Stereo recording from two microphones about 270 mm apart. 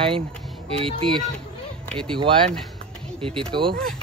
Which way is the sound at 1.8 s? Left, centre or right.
Centre.